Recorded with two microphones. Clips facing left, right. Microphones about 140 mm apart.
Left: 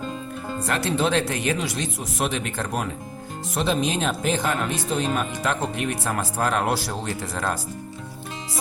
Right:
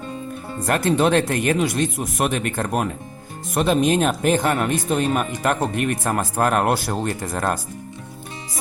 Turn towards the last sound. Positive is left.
turn(degrees=-50)  # may be behind; listen again after turning